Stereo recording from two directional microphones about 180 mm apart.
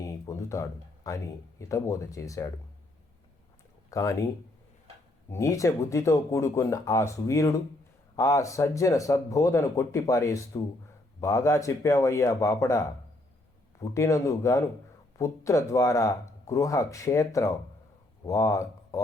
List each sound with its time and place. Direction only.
0.0 s speech: 15° left (ahead or behind)
3.8 s speech: 20° left (ahead or behind)
5.3 s speech: 15° left (ahead or behind)